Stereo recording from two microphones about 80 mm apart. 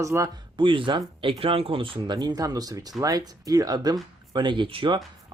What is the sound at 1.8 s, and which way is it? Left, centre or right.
Speech, right.